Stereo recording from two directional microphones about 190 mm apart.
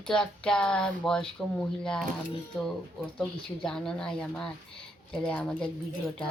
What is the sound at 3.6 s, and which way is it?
A woman's voice, 5° left (ahead or behind).